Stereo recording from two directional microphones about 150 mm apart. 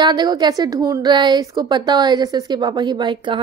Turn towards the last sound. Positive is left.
turn(degrees=-30)  # may be behind; listen again after turning